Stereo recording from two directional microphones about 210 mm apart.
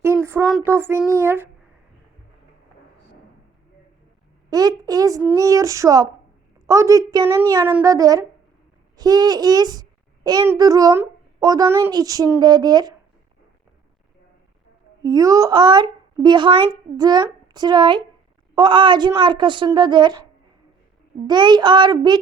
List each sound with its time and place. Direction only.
0.0 s a child's voice: 10° right (ahead or behind)
4.4 s a child's voice: 15° right (ahead or behind)
15.0 s a child's voice: 15° right (ahead or behind)
21.2 s a child's voice: 20° right (ahead or behind)